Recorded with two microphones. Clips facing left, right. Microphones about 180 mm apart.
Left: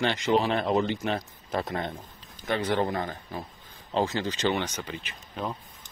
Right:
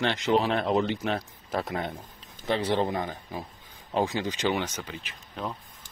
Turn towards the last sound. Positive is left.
turn(degrees=5)  # may be behind; listen again after turning